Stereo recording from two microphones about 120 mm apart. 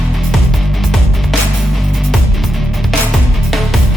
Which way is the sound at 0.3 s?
Centre (ahead or behind).